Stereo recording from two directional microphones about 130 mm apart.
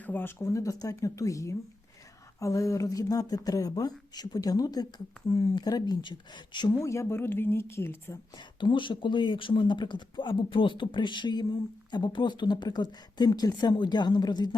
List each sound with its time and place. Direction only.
0.0 s speech: 15° left (ahead or behind)
8.6 s speech: 40° left (ahead or behind)